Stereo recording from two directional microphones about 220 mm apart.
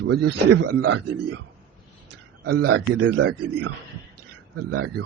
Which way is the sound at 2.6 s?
85° right.